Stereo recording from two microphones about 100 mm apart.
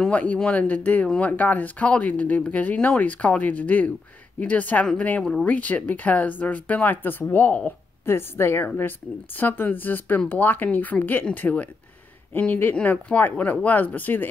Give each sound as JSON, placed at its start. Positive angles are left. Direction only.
{"t": 0.0, "sound": "speech", "side_deg": 15}